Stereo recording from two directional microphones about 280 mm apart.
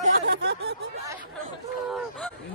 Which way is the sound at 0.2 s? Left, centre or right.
Right.